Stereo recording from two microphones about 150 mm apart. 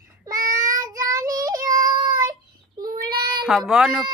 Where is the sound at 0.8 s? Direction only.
25° right (ahead or behind).